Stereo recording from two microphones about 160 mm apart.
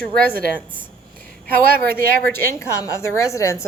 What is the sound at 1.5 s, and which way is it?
Speech, 65° right (ahead or behind).